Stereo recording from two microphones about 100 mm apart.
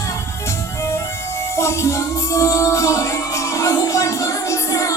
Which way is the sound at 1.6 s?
30° left (ahead or behind).